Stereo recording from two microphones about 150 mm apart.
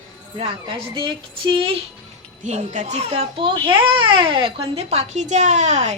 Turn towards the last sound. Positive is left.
turn(degrees=-50)  # may be behind; listen again after turning